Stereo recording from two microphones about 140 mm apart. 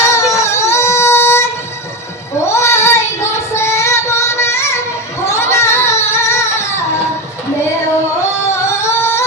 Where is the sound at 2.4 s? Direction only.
20° left (ahead or behind).